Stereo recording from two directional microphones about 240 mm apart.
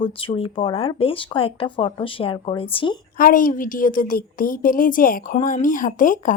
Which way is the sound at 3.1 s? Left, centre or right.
Left.